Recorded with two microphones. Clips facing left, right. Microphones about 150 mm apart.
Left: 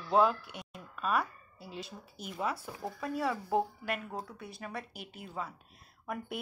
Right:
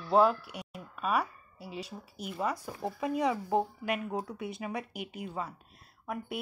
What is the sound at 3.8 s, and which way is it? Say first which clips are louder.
A woman's voice: right 4 dB; 10° right (ahead or behind).